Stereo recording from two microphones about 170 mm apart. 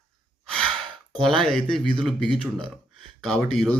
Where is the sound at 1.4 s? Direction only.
5° left (ahead or behind).